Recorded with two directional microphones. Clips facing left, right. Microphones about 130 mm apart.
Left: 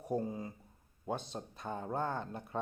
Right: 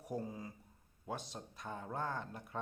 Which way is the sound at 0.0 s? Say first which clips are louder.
Left 6 dB; 30° left (ahead or behind).